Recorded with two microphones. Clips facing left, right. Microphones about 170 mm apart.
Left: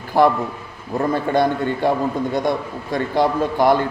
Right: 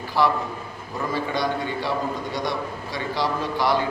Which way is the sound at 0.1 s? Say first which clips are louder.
Left 6 dB; 50° left (ahead or behind).